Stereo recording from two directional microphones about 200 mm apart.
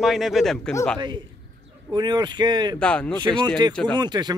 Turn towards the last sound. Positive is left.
turn(degrees=-20)  # may be behind; listen again after turning